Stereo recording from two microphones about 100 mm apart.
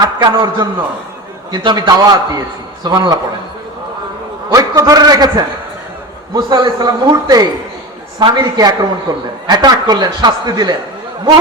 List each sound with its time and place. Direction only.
0.0 s a man's voice: 45° right (ahead or behind)
4.5 s a man's voice: 35° right (ahead or behind)